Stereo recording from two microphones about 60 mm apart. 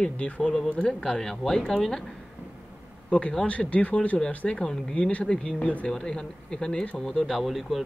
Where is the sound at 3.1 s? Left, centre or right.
Centre.